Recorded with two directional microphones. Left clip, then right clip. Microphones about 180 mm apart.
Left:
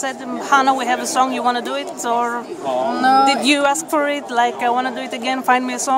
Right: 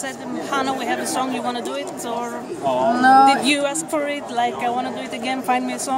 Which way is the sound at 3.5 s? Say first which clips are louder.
Left 5 dB; 40° left (ahead or behind).